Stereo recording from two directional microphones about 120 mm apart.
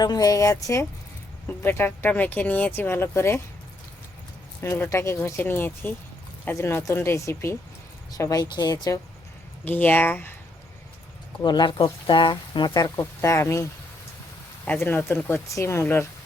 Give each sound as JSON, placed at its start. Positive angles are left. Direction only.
{"t": 0.0, "sound": "speech", "side_deg": 30}
{"t": 4.6, "sound": "speech", "side_deg": 20}
{"t": 9.6, "sound": "speech", "side_deg": 15}
{"t": 11.4, "sound": "speech", "side_deg": 40}
{"t": 13.0, "sound": "speech", "side_deg": 25}